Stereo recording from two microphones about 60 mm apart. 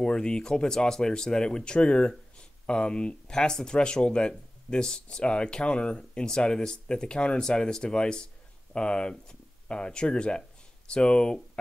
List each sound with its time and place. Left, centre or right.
0.0 s speech: centre